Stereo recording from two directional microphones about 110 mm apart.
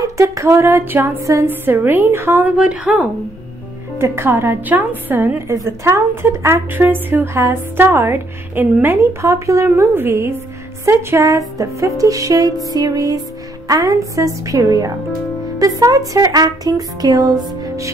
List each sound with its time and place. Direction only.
0.0 s a woman's voice: 30° right (ahead or behind)
2.5 s a woman's voice: 10° right (ahead or behind)
4.0 s a woman's voice: 20° right (ahead or behind)
12.6 s music: 35° right (ahead or behind)